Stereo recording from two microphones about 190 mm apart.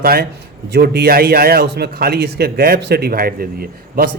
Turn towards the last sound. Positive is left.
turn(degrees=-50)  # may be behind; listen again after turning